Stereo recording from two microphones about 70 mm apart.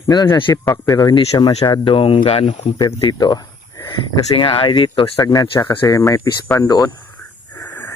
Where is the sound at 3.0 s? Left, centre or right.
Left.